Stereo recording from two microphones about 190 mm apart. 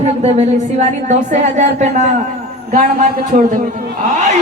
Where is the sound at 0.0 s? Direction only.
35° right (ahead or behind).